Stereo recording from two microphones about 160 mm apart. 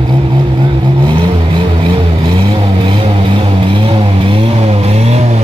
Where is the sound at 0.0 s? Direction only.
30° right (ahead or behind).